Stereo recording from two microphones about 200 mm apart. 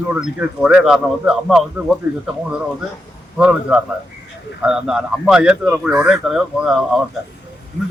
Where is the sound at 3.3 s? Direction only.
5° right (ahead or behind).